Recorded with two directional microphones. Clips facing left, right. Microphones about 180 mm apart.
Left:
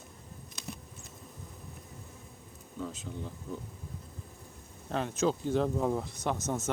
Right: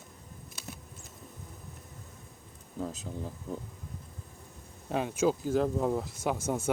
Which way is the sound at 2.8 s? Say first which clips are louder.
Right 2 dB; 40° right (ahead or behind).